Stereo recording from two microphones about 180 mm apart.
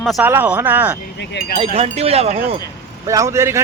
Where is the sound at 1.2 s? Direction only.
70° left (ahead or behind).